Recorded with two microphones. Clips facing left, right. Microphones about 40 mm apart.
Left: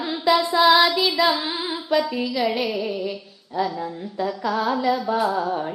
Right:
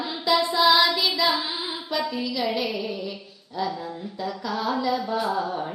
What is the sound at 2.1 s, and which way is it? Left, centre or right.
Music, centre.